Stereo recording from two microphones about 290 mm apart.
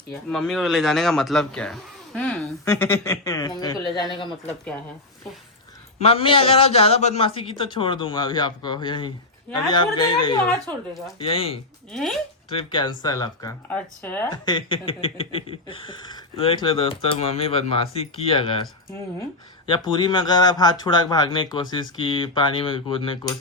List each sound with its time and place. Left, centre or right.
0.3 s speech: centre
6.0 s speech: centre
11.9 s speech: centre
12.5 s speech: centre